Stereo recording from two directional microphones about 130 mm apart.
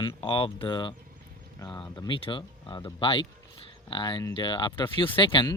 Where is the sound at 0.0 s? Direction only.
45° left (ahead or behind).